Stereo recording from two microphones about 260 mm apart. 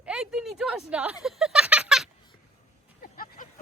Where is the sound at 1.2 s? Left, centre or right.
Centre.